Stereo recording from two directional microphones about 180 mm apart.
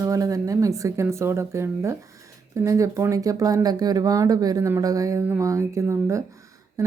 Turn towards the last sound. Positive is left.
turn(degrees=-20)  # may be behind; listen again after turning